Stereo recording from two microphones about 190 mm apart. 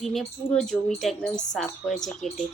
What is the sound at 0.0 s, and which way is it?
A woman's voice, centre (ahead or behind).